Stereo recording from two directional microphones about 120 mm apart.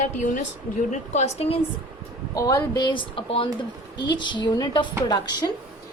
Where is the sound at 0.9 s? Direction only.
75° left (ahead or behind); by 1.6 s 55° left (ahead or behind).